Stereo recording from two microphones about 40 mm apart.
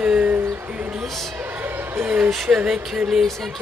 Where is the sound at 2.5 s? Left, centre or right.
Right.